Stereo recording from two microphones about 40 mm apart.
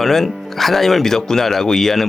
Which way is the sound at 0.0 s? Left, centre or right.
Centre.